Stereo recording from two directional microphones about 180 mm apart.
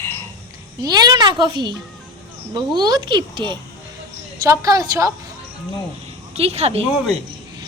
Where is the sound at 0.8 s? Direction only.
20° right (ahead or behind).